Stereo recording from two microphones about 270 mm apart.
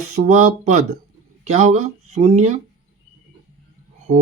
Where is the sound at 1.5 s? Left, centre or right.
Right.